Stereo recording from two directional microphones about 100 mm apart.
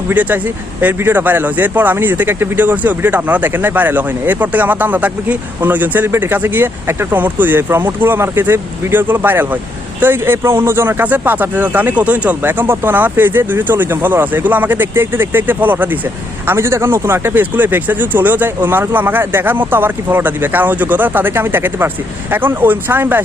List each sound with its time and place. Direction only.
0.1 s speech: 15° right (ahead or behind)